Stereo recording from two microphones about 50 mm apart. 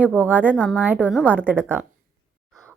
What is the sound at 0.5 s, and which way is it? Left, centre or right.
Speech, left.